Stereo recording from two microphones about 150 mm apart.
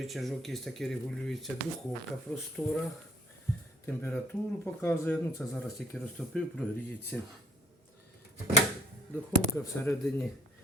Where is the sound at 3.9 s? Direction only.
10° left (ahead or behind).